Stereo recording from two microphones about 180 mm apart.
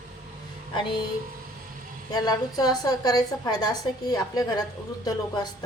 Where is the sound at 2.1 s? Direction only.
20° left (ahead or behind).